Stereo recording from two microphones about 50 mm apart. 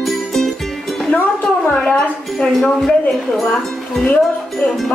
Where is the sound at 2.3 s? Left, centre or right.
Centre.